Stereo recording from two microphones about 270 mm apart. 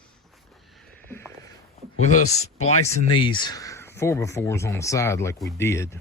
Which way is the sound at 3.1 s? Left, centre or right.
Centre.